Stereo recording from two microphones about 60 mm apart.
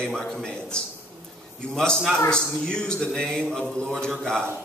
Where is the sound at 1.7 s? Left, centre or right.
Centre.